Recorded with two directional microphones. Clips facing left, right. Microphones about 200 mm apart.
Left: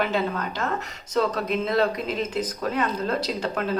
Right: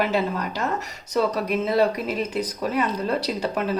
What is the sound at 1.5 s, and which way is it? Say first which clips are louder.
Speech: right 2 dB; 10° right (ahead or behind).